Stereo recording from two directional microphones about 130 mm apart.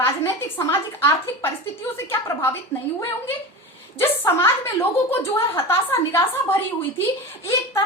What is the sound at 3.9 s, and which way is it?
A woman's voice, 20° left (ahead or behind).